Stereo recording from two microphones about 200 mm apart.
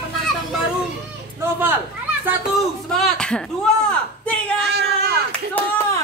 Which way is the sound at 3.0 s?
5° left (ahead or behind).